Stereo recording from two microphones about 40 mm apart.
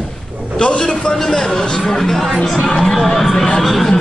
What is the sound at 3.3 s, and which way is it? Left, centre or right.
Speech, centre.